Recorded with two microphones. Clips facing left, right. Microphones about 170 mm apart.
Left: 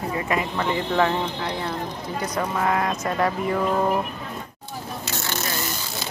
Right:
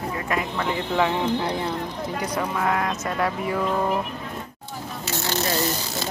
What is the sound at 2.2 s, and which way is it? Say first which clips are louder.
Speech: left 2 dB; centre (ahead or behind).